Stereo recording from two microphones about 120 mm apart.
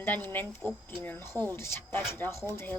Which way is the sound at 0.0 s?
15° left (ahead or behind).